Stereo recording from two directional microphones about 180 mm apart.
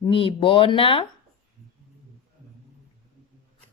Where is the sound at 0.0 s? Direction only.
30° left (ahead or behind).